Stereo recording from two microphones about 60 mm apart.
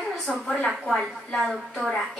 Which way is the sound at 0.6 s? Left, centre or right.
Centre.